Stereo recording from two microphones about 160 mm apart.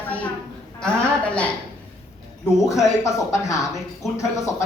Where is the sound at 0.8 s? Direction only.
5° left (ahead or behind).